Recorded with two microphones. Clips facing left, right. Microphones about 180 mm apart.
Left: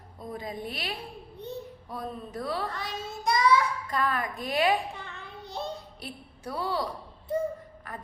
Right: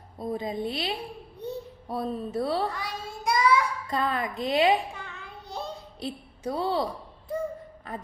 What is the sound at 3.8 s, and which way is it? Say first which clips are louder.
Speech: right 1 dB; 25° right (ahead or behind).